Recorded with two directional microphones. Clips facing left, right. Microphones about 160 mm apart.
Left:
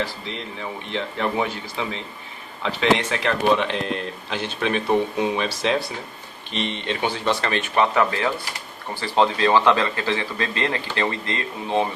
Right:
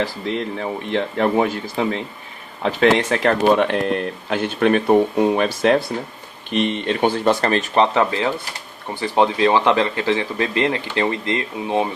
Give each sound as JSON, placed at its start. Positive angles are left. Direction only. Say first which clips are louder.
{"t": 0.0, "sound": "speech", "louder": "right 6 dB", "side_deg": -45}
{"t": 7.9, "sound": "speech", "louder": "right 2 dB", "side_deg": -20}